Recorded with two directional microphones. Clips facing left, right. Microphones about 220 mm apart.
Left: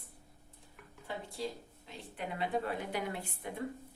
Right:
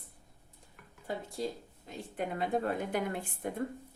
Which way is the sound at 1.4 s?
45° right (ahead or behind).